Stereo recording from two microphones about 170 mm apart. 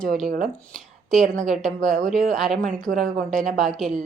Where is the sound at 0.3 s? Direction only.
60° right (ahead or behind).